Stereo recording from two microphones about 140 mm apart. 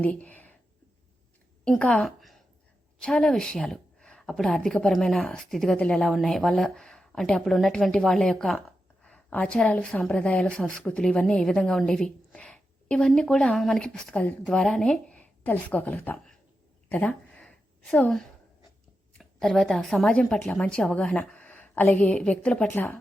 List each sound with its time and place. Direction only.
0.0 s speech: 10° left (ahead or behind)
1.6 s a woman's voice: 5° left (ahead or behind)
16.9 s a sound: 10° left (ahead or behind)
19.2 s a woman's voice: centre (ahead or behind)